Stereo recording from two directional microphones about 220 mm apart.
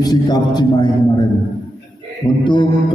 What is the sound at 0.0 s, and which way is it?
Speech, 15° left (ahead or behind).